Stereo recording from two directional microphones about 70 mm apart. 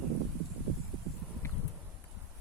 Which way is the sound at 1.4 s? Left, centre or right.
Left.